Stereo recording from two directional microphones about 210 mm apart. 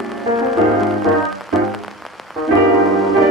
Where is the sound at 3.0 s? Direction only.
Centre (ahead or behind).